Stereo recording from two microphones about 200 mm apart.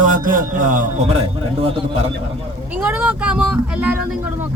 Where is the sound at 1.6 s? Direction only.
30° right (ahead or behind).